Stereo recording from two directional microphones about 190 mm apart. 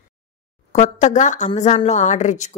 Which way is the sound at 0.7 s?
40° left (ahead or behind).